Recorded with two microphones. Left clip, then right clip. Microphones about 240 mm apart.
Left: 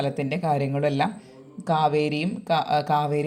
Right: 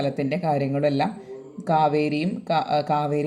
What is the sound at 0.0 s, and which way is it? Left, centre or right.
Speech, left.